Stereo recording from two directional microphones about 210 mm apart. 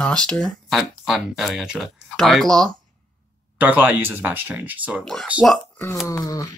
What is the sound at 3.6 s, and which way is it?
Speech, 10° right (ahead or behind).